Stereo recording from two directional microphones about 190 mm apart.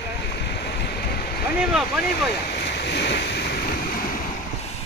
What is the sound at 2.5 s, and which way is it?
Waves, 60° left (ahead or behind).